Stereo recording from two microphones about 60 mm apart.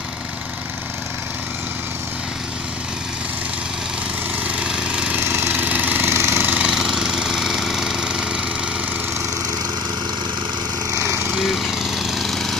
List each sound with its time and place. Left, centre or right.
4.5 s a sound: centre
5.2 s engine: right
6.4 s jackhammer: right
6.7 s engine: centre
11.0 s lawn mower: right
11.3 s lawn mower: centre